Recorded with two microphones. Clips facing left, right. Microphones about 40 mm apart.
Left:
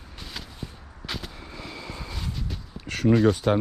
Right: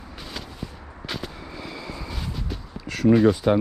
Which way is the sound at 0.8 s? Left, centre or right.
Right.